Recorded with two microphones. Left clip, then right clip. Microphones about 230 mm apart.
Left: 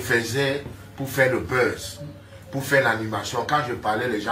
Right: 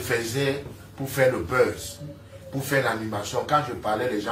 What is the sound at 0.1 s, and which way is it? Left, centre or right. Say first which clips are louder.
Speech: left 3 dB; centre.